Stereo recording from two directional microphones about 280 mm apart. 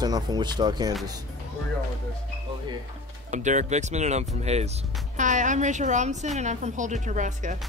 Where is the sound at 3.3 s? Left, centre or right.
Right.